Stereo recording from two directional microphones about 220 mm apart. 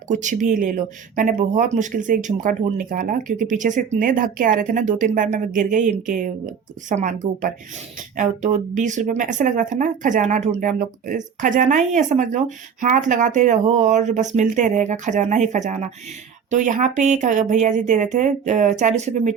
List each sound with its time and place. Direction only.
0.1 s speech: 35° right (ahead or behind)